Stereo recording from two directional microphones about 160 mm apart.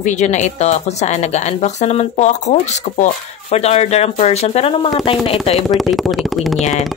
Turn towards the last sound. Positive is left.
turn(degrees=0)  # may be behind; listen again after turning